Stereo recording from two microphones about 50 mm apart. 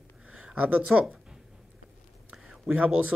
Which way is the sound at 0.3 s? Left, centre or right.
Centre.